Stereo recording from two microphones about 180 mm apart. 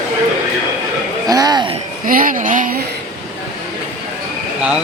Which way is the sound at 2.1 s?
50° right (ahead or behind).